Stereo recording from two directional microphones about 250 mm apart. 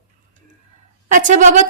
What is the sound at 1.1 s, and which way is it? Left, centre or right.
Speech, right.